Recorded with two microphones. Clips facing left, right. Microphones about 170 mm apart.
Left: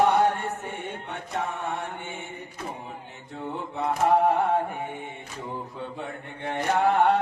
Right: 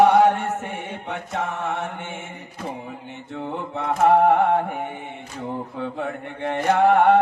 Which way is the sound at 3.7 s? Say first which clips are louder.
Right 5 dB; 75° right (ahead or behind).